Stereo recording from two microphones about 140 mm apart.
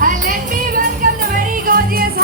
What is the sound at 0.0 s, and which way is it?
Music, 80° right.